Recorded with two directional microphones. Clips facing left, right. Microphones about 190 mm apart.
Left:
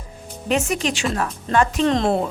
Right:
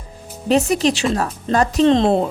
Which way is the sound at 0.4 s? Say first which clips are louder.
Right 6 dB; 35° right (ahead or behind).